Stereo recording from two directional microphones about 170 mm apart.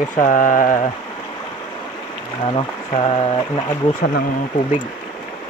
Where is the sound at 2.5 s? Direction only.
35° left (ahead or behind).